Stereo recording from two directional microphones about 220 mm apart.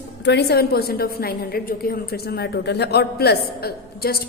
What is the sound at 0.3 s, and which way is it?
A man's voice, 50° left (ahead or behind).